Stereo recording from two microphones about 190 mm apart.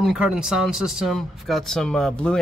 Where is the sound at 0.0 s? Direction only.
5° right (ahead or behind).